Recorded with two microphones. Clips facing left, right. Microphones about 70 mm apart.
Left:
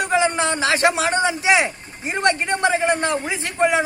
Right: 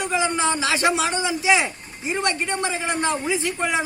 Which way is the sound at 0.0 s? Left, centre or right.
Left.